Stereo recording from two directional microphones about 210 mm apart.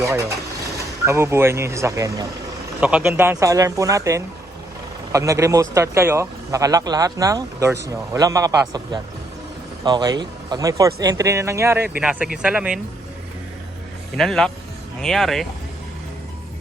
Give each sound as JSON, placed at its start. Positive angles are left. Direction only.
{"t": 0.0, "sound": "speech", "side_deg": -15}
{"t": 14.2, "sound": "speech", "side_deg": 0}